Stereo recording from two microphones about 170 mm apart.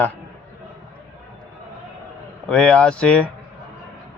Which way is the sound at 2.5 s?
5° left (ahead or behind).